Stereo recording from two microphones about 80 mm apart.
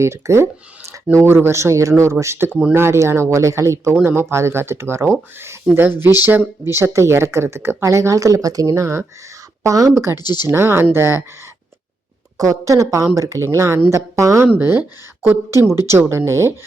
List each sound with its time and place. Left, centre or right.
0.0 s speech: right
10.2 s speech: left
10.5 s speech: right
12.4 s speech: right
14.4 s speech: right